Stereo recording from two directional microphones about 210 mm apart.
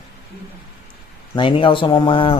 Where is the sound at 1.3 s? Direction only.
25° left (ahead or behind).